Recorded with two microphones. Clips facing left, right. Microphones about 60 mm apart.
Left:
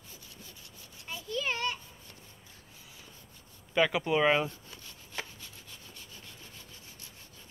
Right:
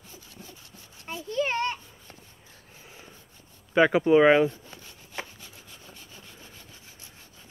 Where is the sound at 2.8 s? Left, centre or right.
Right.